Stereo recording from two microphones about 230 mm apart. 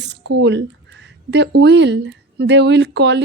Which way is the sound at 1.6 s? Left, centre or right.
Right.